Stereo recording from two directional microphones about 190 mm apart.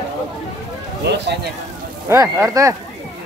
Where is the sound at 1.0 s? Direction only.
65° right (ahead or behind).